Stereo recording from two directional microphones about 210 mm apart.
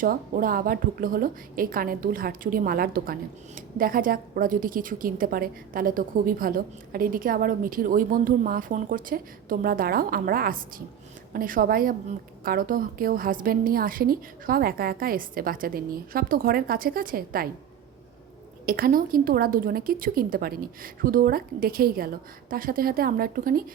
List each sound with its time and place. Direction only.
0.0 s a woman's voice: 45° right (ahead or behind)
18.6 s a woman's voice: 45° right (ahead or behind)